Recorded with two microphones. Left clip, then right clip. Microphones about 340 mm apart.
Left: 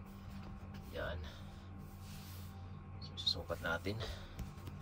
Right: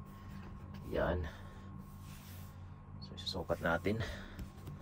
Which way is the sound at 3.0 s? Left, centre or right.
Centre.